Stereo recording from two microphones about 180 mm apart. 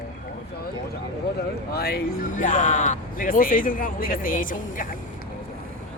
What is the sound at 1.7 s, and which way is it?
Speech, 60° left (ahead or behind).